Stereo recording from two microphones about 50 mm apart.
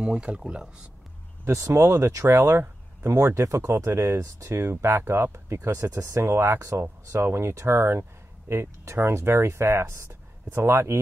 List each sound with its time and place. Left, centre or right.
0.0 s speech: centre
1.4 s speech: right
1.8 s speech: right
3.4 s speech: right
4.2 s speech: right
4.6 s speech: right
6.2 s speech: right
7.2 s speech: right
10.0 s speech: right